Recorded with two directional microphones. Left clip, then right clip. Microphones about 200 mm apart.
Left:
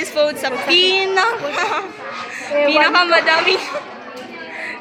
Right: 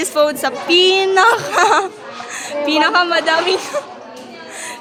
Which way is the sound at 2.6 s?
40° right (ahead or behind).